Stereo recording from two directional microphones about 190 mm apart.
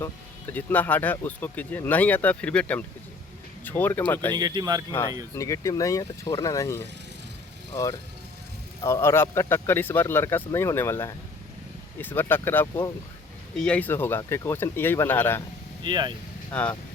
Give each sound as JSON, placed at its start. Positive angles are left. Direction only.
{"t": 0.5, "sound": "speech", "side_deg": 10}
{"t": 4.4, "sound": "speech", "side_deg": -20}
{"t": 5.3, "sound": "speech", "side_deg": 15}
{"t": 15.8, "sound": "speech", "side_deg": -25}
{"t": 16.5, "sound": "speech", "side_deg": 5}